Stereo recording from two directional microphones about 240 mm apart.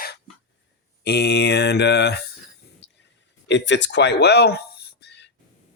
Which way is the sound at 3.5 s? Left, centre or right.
Left.